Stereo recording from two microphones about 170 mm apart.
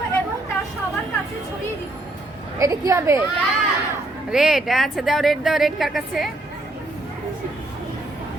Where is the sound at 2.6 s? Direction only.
20° right (ahead or behind).